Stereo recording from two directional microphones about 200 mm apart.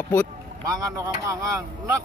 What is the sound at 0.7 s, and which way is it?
Speech, 15° right (ahead or behind).